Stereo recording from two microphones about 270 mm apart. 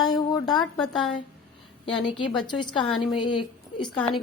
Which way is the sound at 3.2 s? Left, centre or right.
Left.